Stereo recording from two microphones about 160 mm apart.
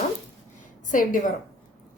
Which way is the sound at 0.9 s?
55° left (ahead or behind).